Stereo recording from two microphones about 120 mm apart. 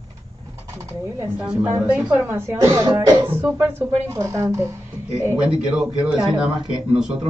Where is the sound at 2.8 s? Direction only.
40° right (ahead or behind).